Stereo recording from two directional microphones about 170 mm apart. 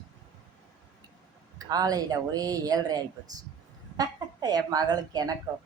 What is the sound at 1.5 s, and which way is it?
A woman's voice, 20° right (ahead or behind).